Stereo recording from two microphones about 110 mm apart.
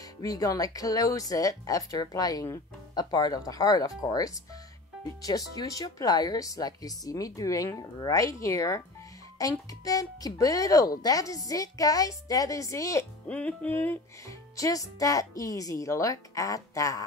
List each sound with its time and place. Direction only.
0.2 s a woman's voice: 30° left (ahead or behind)
13.3 s music: 10° left (ahead or behind)
14.2 s a woman's voice: 30° left (ahead or behind)